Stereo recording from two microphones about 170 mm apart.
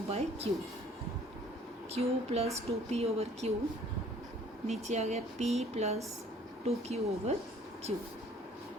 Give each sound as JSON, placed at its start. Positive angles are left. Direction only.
{"t": 0.1, "sound": "speech", "side_deg": -35}
{"t": 1.9, "sound": "speech", "side_deg": -35}
{"t": 4.6, "sound": "speech", "side_deg": -40}